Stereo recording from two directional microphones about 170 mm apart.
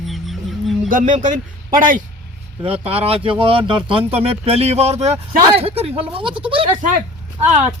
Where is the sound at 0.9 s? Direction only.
50° right (ahead or behind).